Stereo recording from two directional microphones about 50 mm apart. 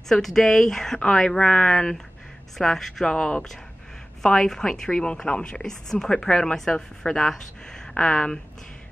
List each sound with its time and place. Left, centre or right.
0.1 s a woman's voice: centre